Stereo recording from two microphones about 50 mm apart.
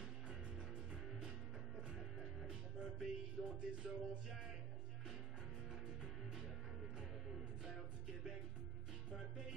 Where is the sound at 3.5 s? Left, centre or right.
Right.